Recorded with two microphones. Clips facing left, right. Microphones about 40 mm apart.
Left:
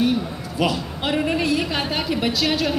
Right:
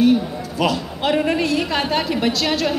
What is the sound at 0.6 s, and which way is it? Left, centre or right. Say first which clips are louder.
A woman's voice: right 2 dB; centre.